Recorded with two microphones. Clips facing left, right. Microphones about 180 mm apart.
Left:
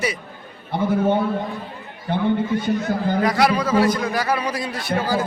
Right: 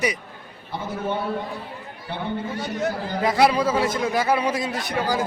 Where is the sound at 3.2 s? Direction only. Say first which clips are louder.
Right 2 dB; 25° right (ahead or behind).